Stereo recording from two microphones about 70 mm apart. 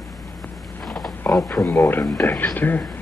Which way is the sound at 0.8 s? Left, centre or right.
Centre.